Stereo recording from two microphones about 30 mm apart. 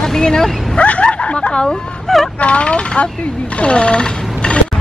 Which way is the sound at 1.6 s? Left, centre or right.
Centre.